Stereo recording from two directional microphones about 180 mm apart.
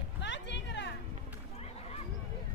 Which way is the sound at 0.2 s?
80° left.